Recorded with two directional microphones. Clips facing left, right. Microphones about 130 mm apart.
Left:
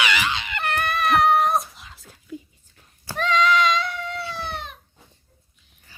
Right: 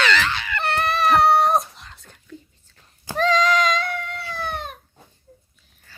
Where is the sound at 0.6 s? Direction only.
35° right (ahead or behind).